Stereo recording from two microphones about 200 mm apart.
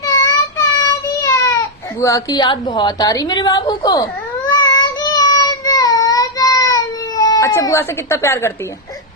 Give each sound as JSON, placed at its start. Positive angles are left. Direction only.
{"t": 0.0, "sound": "child singing", "side_deg": 15}
{"t": 2.0, "sound": "a woman's voice", "side_deg": 15}
{"t": 4.7, "sound": "child singing", "side_deg": 20}